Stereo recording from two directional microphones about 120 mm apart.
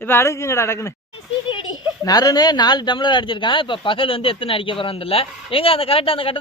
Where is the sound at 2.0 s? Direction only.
30° left (ahead or behind).